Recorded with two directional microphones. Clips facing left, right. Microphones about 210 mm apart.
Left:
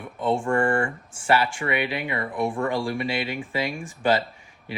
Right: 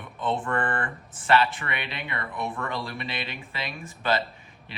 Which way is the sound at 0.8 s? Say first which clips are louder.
Left 5 dB; 30° left (ahead or behind).